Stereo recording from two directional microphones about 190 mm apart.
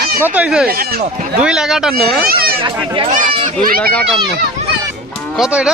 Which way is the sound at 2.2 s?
50° right (ahead or behind).